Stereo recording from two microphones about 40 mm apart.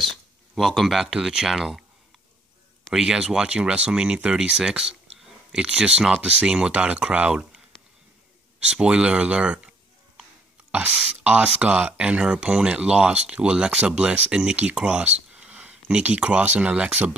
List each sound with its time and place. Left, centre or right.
0.6 s speech: centre
2.9 s speech: centre
8.5 s speech: right
10.7 s speech: right